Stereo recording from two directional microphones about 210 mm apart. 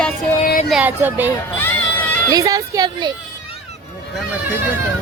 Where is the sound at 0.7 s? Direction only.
10° right (ahead or behind).